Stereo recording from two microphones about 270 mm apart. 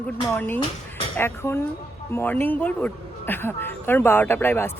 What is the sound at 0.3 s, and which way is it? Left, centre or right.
Speech, centre.